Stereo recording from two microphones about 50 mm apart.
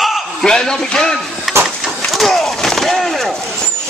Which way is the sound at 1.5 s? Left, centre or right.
Right.